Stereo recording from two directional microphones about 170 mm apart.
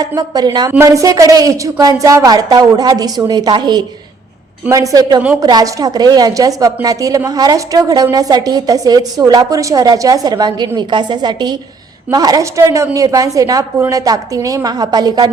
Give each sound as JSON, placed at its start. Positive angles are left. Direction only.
{"t": 0.0, "sound": "a woman's voice", "side_deg": -20}